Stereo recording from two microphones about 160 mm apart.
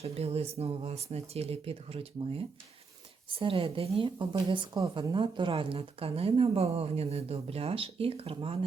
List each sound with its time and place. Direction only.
0.0 s speech: 40° right (ahead or behind)